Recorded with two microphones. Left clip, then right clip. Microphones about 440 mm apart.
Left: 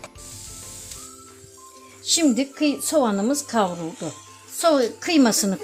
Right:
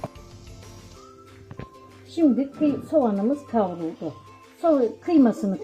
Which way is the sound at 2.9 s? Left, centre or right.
Left.